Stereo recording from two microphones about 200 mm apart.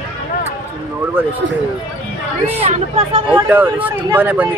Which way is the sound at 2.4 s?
30° right (ahead or behind).